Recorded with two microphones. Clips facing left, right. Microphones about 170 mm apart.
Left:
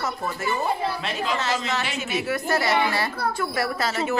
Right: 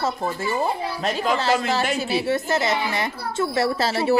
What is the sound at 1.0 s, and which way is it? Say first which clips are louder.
A woman's voice: right 4 dB; 40° right (ahead or behind).